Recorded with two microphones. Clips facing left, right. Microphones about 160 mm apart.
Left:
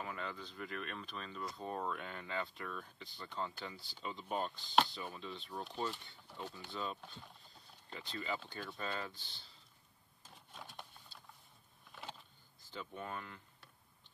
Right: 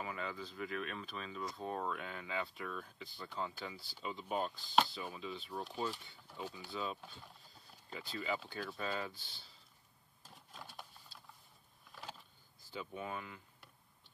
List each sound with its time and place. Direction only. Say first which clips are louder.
0.0 s speech: right 2 dB; centre (ahead or behind)
10.2 s printer: even; centre (ahead or behind)
11.9 s a sound: even; centre (ahead or behind)
12.7 s speech: right 2 dB; 5° right (ahead or behind)